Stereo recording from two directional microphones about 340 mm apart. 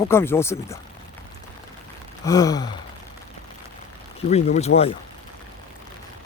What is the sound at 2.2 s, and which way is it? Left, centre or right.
Speech, centre.